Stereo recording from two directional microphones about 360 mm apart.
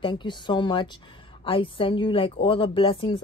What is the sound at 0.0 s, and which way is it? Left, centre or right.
Speech, centre.